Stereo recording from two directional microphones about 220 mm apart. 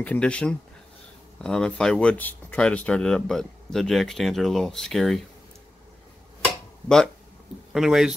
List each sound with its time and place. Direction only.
0.0 s speech: 5° left (ahead or behind)
7.7 s speech: centre (ahead or behind)